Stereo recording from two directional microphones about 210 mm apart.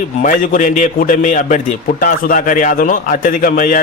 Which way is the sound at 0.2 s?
40° left (ahead or behind).